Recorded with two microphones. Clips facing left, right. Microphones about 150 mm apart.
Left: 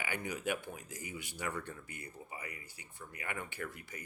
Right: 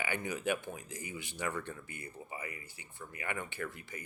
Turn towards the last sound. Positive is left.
turn(degrees=-20)  # may be behind; listen again after turning